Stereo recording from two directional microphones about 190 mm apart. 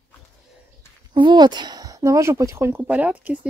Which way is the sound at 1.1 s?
25° right (ahead or behind).